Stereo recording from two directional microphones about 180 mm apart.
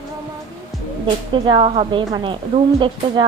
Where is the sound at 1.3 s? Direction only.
30° right (ahead or behind).